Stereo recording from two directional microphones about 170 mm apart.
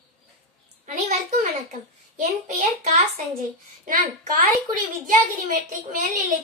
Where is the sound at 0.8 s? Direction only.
45° right (ahead or behind).